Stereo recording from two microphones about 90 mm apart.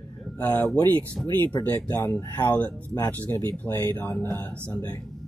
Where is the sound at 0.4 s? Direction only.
20° left (ahead or behind).